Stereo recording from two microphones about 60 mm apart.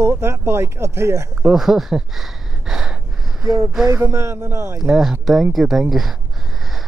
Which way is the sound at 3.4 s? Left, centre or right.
Right.